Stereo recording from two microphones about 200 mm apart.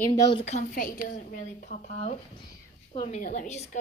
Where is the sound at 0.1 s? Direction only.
20° left (ahead or behind).